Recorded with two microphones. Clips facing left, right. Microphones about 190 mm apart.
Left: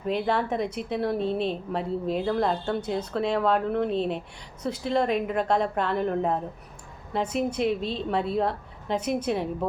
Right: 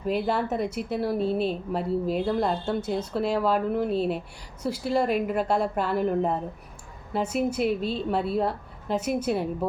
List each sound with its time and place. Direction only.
0.0 s a woman's voice: 5° right (ahead or behind)